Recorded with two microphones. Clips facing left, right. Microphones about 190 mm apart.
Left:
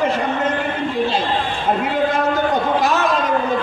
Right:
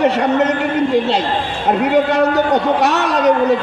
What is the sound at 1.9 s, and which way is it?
A man's voice, 75° right (ahead or behind).